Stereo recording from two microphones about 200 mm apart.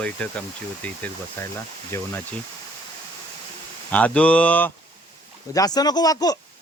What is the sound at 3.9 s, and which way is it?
Speech, 5° left (ahead or behind).